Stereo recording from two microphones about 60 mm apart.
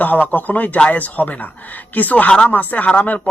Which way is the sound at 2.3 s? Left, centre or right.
Centre.